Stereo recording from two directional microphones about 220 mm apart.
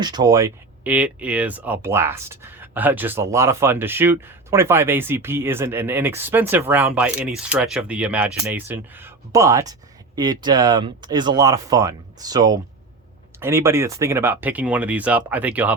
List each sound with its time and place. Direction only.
0.0 s speech: 20° right (ahead or behind)